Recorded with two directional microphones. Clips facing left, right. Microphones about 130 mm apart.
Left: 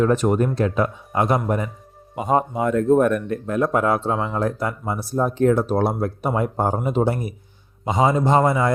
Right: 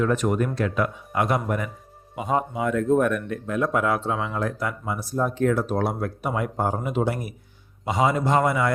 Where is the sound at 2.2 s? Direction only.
45° left (ahead or behind).